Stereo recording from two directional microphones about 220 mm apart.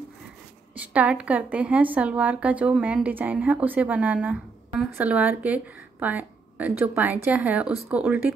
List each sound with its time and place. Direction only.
0.7 s a woman's voice: 5° right (ahead or behind)